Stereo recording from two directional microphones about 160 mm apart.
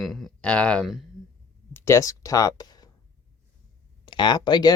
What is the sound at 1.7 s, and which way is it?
Speech, 15° left (ahead or behind).